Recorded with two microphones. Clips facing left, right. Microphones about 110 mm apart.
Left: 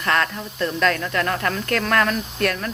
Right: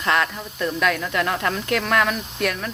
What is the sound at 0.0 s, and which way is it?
Speech, 15° right (ahead or behind).